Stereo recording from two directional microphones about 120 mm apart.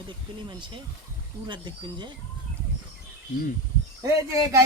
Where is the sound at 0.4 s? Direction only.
40° right (ahead or behind).